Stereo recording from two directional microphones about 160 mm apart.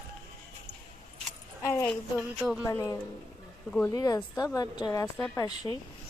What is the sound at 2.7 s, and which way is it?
A woman's voice, 20° left (ahead or behind).